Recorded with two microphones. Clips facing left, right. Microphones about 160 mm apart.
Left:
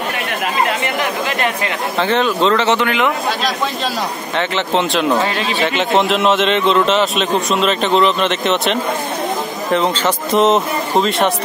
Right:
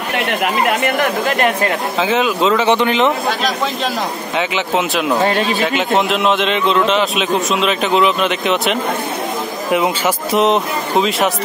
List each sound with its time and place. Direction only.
0.7 s speech: 50° right (ahead or behind)
2.0 s a man's voice: 5° right (ahead or behind)
4.4 s a man's voice: 5° right (ahead or behind)
5.2 s speech: 45° right (ahead or behind)
5.6 s a man's voice: centre (ahead or behind)